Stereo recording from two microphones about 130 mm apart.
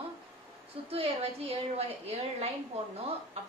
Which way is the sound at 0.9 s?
50° right (ahead or behind).